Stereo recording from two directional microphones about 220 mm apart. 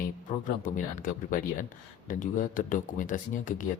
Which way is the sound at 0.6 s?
35° left (ahead or behind).